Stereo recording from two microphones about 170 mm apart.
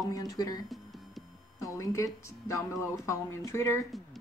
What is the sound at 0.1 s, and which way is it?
Speech, 20° left (ahead or behind).